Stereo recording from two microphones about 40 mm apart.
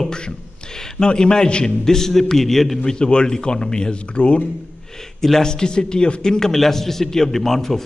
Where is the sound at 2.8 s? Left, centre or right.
Centre.